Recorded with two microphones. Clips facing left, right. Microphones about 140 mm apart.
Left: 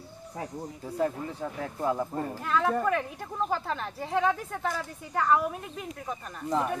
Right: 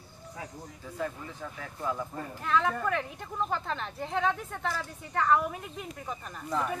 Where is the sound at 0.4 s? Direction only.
35° left (ahead or behind).